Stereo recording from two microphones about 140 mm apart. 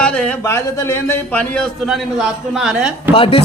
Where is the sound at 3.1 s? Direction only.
40° left (ahead or behind).